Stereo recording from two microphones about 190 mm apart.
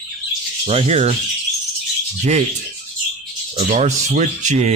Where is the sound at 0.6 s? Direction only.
30° right (ahead or behind).